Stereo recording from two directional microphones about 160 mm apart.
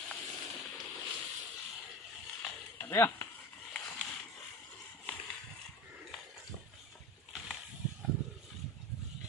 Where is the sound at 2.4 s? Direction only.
15° left (ahead or behind).